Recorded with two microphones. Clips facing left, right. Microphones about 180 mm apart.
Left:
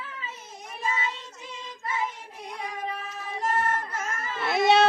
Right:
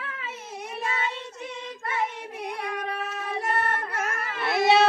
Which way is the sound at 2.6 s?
65° right (ahead or behind).